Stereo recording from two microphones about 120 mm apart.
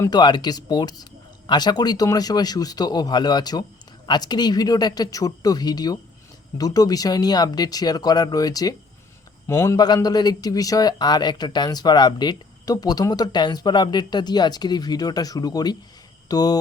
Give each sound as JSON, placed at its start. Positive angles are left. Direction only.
{"t": 0.1, "sound": "speech", "side_deg": 40}